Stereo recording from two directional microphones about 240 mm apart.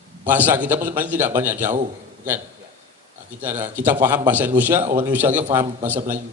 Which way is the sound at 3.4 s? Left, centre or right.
Centre.